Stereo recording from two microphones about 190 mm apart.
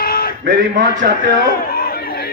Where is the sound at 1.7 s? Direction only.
50° left (ahead or behind).